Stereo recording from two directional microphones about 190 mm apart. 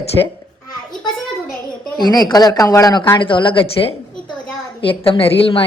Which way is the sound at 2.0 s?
20° left (ahead or behind).